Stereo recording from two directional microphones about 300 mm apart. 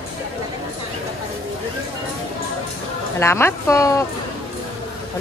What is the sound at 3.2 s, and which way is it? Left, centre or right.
Speech, centre.